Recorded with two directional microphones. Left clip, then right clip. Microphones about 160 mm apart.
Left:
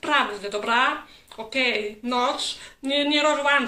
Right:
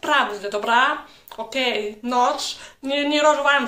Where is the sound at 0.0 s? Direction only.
15° left (ahead or behind).